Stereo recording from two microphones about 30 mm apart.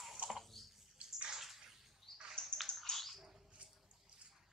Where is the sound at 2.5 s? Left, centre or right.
Centre.